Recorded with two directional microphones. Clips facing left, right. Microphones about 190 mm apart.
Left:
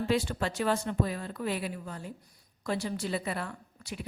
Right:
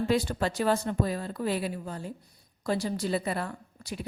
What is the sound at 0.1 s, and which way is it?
A woman's voice, 40° right (ahead or behind).